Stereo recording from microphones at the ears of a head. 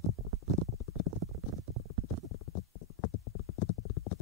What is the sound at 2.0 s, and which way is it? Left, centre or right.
Clip-clop, left.